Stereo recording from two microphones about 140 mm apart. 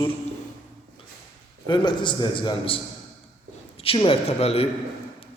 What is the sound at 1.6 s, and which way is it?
A man's voice, 35° left (ahead or behind).